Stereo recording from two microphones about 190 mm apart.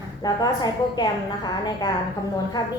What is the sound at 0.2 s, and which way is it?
Speech, 20° left (ahead or behind).